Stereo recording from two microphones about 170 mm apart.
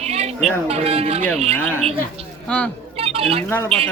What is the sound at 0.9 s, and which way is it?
Speech, 40° right (ahead or behind).